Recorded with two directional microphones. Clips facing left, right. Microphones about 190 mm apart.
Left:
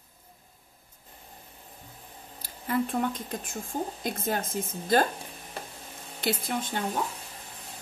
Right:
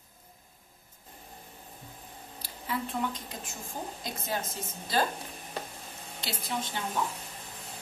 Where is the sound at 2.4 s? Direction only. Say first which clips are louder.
Left 7 dB; 50° left (ahead or behind).